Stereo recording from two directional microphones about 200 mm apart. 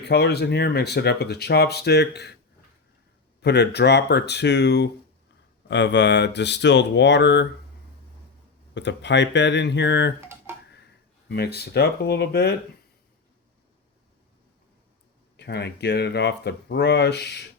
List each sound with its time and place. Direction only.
0.0 s speech: 55° left (ahead or behind)
3.4 s speech: 55° left (ahead or behind)
8.7 s speech: 60° left (ahead or behind)
10.2 s a sound: 10° right (ahead or behind)
11.3 s speech: 55° left (ahead or behind)
15.4 s speech: 55° left (ahead or behind)